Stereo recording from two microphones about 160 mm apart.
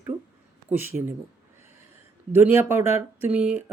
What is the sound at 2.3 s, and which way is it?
A man's voice, 15° right (ahead or behind).